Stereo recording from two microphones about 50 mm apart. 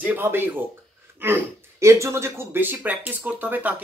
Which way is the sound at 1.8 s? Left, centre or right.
Right.